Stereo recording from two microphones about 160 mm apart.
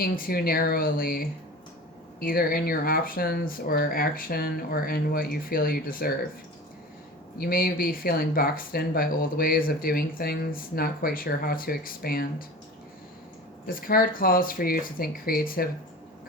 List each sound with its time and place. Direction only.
0.0 s speech: 65° left (ahead or behind)
7.3 s speech: 65° left (ahead or behind)
13.7 s speech: 65° left (ahead or behind)